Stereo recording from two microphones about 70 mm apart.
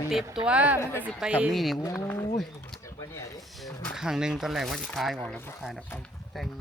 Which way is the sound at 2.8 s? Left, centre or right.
Left.